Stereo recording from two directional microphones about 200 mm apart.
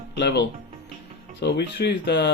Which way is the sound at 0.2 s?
55° left (ahead or behind).